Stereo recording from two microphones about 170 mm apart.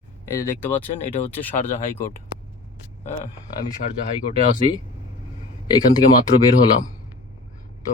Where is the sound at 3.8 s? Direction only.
55° left (ahead or behind).